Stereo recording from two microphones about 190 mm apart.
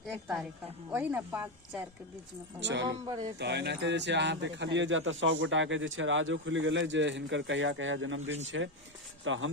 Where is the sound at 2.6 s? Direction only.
70° right (ahead or behind).